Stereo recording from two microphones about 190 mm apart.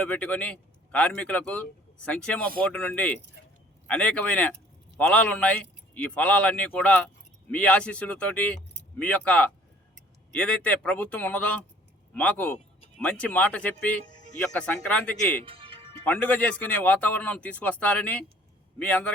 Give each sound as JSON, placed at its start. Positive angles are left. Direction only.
{"t": 0.0, "sound": "speech", "side_deg": 5}
{"t": 15.4, "sound": "music", "side_deg": -30}
{"t": 16.0, "sound": "speech", "side_deg": 10}